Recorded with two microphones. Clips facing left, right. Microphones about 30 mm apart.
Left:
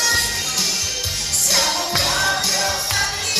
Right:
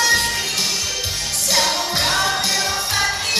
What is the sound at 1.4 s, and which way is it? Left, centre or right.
Music, centre.